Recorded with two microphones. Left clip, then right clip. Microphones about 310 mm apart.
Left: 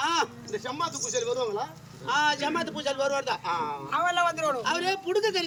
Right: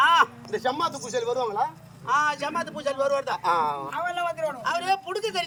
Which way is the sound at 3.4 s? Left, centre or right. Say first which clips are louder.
Right 6 dB; centre.